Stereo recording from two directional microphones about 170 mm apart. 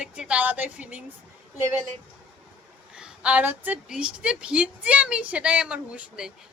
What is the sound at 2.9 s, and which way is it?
A woman's voice, 5° right (ahead or behind).